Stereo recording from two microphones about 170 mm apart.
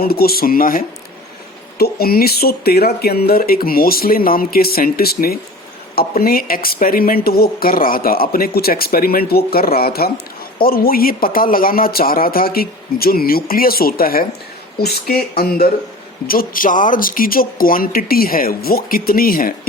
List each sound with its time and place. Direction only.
0.0 s speech: 65° left (ahead or behind)